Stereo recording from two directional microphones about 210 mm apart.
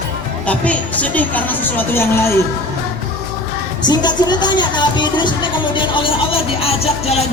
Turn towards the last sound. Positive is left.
turn(degrees=30)  # may be behind; listen again after turning